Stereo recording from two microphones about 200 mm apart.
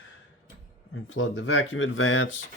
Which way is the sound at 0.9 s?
85° left.